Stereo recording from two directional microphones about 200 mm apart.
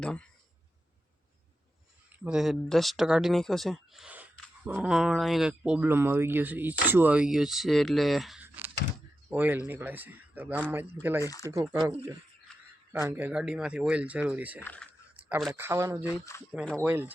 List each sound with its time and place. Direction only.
0.0 s speech: 5° left (ahead or behind)
2.1 s speech: 5° right (ahead or behind)
11.2 s speech: 15° left (ahead or behind)
11.5 s speech: 15° right (ahead or behind)
14.6 s speech: 5° left (ahead or behind)
15.1 s a sound: 5° right (ahead or behind)
15.6 s speech: 15° right (ahead or behind)
16.0 s speech: 15° left (ahead or behind)
16.5 s speech: centre (ahead or behind)
16.8 s speech: 10° right (ahead or behind)